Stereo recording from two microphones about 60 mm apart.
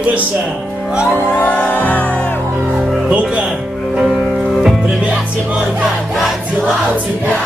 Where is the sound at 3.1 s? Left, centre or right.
Centre.